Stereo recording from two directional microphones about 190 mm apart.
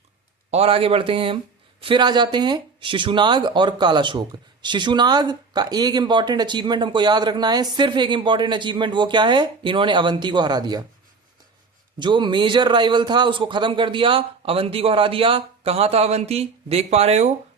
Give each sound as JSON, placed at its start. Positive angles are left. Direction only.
{"t": 0.5, "sound": "speech", "side_deg": -30}
{"t": 11.9, "sound": "speech", "side_deg": -25}